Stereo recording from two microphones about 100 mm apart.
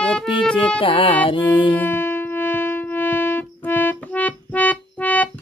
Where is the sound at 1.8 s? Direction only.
20° left (ahead or behind).